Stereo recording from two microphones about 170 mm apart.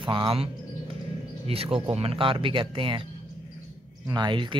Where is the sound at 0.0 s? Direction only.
30° right (ahead or behind).